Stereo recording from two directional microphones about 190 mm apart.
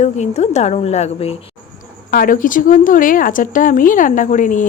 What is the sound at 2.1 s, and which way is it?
A woman's voice, 45° left (ahead or behind).